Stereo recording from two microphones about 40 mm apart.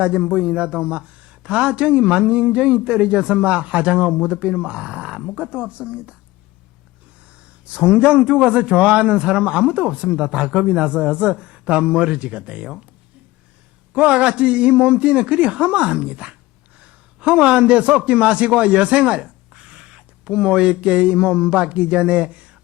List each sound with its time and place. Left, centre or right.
0.2 s speech: right
7.6 s speech: right
13.9 s a man's voice: right